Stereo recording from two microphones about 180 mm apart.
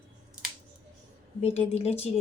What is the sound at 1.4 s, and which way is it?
Speech, 35° left (ahead or behind).